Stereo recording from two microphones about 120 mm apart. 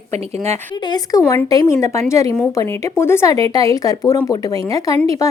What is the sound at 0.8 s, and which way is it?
A woman's voice, 35° left (ahead or behind).